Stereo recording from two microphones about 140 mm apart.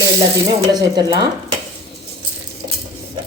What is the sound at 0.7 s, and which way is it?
Speech, 30° right (ahead or behind).